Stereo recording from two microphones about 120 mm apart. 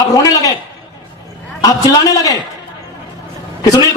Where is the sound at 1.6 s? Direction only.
30° left (ahead or behind).